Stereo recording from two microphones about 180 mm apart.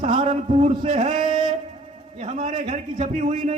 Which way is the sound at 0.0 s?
40° right (ahead or behind).